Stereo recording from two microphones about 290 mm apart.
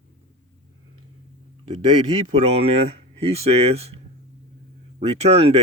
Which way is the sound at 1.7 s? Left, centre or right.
Right.